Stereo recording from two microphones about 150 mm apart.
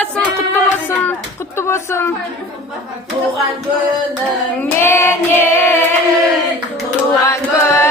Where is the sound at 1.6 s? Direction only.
15° left (ahead or behind).